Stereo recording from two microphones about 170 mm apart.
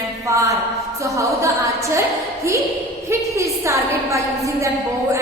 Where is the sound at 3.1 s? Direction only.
15° right (ahead or behind).